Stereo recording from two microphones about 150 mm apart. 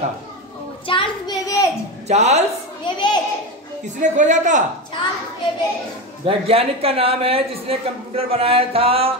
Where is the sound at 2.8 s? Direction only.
30° left (ahead or behind).